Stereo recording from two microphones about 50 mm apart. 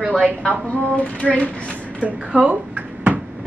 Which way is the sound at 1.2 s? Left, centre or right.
Left.